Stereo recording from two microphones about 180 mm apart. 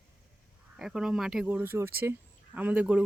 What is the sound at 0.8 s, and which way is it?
Speech, 5° right (ahead or behind).